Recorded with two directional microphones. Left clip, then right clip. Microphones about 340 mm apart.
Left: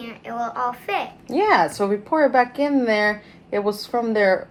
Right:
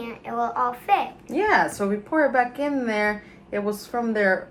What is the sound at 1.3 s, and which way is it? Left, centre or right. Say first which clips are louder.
A woman's voice: left 3 dB; left.